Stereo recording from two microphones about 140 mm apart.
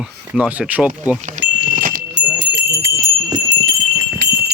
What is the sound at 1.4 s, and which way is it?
Wind chime, 75° right (ahead or behind).